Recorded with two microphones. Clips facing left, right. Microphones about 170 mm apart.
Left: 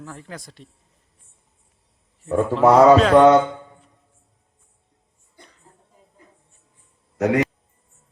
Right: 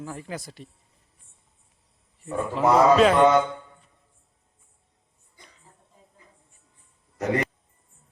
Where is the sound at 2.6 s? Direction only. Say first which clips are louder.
Left 6 dB; 80° left.